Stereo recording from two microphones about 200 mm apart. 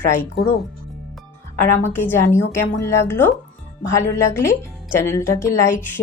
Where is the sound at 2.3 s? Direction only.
10° left (ahead or behind).